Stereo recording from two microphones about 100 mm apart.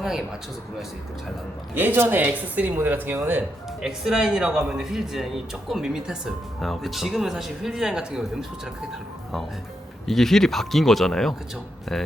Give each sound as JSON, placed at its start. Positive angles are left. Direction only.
{"t": 1.7, "sound": "speech", "side_deg": -20}
{"t": 3.8, "sound": "speech", "side_deg": -5}